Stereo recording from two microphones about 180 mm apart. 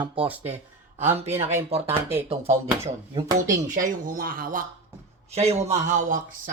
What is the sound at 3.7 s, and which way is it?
Speech, 50° right (ahead or behind).